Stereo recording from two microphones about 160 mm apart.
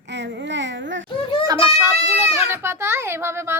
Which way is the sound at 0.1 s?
90° right.